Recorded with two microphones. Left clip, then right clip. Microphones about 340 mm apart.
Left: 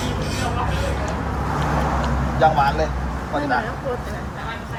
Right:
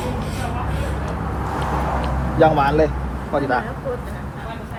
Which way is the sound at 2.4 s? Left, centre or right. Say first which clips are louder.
Right 2 dB; centre.